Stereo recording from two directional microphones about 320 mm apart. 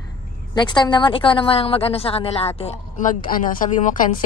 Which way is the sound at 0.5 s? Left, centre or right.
Centre.